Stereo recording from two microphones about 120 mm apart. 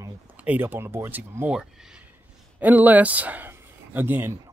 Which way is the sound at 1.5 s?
5° right (ahead or behind).